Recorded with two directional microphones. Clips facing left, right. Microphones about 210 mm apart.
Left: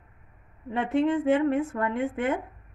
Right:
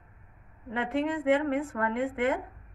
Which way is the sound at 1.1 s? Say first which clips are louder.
Left 3 dB; 25° left (ahead or behind).